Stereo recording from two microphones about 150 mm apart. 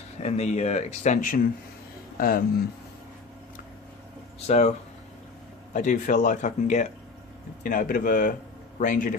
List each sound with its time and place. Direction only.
0.2 s speech: 50° left (ahead or behind)
2.1 s speech: 80° left
4.4 s speech: 50° left (ahead or behind)
5.7 s speech: 60° left (ahead or behind)
7.6 s speech: 65° left (ahead or behind)